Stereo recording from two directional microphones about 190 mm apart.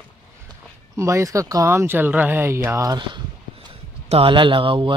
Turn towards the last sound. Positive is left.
turn(degrees=-25)  # may be behind; listen again after turning